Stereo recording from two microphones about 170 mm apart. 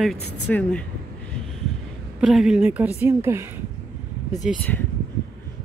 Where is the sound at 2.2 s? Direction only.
Centre (ahead or behind).